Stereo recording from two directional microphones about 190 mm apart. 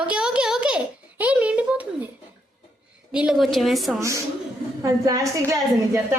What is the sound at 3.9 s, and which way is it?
A woman's voice, 15° right (ahead or behind).